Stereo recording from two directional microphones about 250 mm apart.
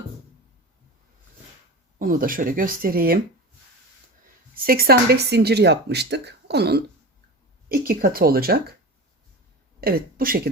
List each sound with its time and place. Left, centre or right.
2.0 s speech: right
4.6 s speech: right
9.8 s speech: right